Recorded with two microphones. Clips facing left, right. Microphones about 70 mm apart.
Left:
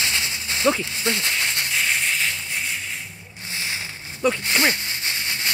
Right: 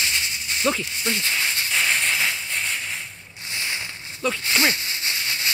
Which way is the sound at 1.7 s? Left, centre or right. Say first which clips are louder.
Right 2 dB; centre.